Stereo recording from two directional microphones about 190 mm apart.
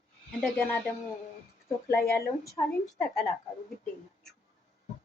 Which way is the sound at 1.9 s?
15° left (ahead or behind).